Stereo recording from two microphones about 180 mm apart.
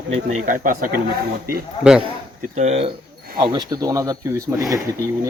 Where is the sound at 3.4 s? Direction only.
25° right (ahead or behind).